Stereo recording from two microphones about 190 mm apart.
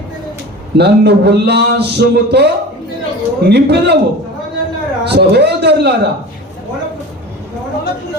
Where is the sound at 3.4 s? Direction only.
60° right (ahead or behind).